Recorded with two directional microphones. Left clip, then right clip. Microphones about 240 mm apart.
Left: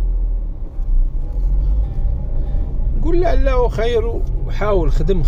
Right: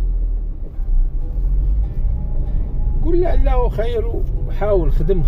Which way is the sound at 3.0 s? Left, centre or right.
Left.